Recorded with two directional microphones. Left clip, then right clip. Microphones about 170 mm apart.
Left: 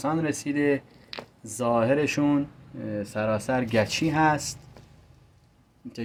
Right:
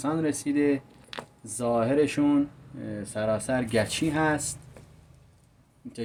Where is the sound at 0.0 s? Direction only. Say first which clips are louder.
Left 1 dB; 25° left (ahead or behind).